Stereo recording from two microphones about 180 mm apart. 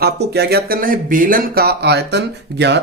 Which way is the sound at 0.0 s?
65° right (ahead or behind).